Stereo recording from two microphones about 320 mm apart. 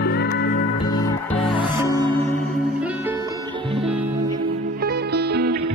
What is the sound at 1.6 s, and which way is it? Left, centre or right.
Music, centre.